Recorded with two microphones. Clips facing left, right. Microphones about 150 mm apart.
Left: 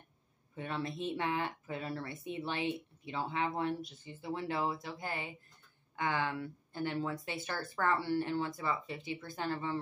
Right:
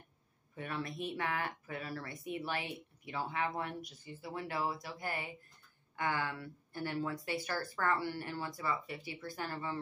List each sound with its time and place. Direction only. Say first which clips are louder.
0.6 s speech: left 2 dB; 25° left (ahead or behind)